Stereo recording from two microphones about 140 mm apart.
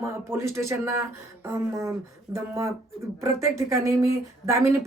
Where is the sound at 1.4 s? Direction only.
20° right (ahead or behind).